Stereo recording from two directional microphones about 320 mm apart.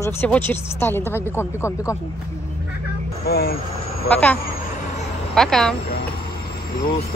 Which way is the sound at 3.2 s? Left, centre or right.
Left.